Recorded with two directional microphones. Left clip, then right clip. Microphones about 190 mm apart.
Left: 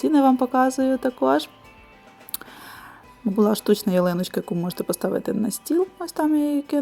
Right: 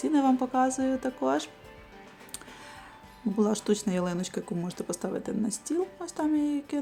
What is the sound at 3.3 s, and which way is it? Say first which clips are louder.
Speech: left 8 dB; 30° left (ahead or behind).